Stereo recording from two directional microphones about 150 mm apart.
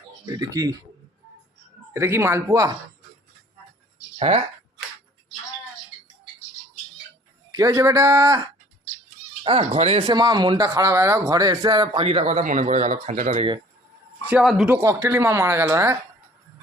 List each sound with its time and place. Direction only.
0.3 s speech: 25° right (ahead or behind)
1.9 s speech: 15° right (ahead or behind)
4.2 s speech: 45° right (ahead or behind)
7.5 s speech: 25° right (ahead or behind)
9.4 s speech: 40° right (ahead or behind)
10.1 s speech: 30° right (ahead or behind)
12.0 s speech: 45° right (ahead or behind)
12.4 s speech: 60° right (ahead or behind)
14.4 s speech: centre (ahead or behind)
14.7 s speech: 20° right (ahead or behind)